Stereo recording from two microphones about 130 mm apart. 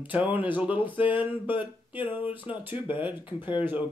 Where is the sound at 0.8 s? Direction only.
40° left (ahead or behind).